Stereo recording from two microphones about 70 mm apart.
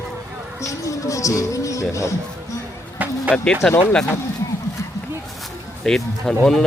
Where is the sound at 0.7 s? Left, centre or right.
Left.